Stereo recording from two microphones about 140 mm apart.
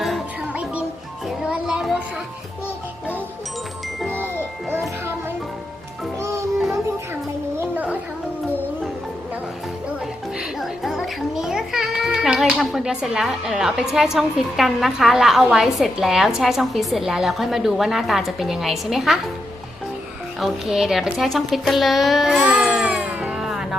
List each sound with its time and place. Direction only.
0.0 s music: 5° right (ahead or behind)
4.0 s a sound: 15° right (ahead or behind)
6.1 s music: 20° right (ahead or behind)
7.6 s a sound: 10° right (ahead or behind)
10.6 s a woman's voice: centre (ahead or behind)
20.4 s a child's voice: centre (ahead or behind)